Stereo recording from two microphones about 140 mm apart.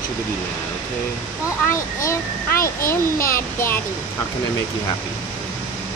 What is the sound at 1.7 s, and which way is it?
Speech, 20° left (ahead or behind).